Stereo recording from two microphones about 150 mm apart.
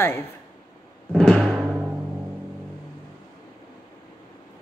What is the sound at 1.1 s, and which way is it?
Timpani, 5° left (ahead or behind).